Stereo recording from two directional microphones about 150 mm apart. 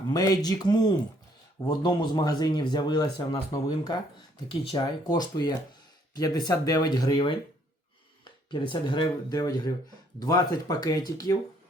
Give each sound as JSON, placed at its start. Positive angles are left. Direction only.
{"t": 0.1, "sound": "speech", "side_deg": 25}